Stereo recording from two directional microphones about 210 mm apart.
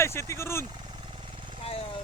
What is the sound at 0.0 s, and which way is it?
Speech, 10° left (ahead or behind).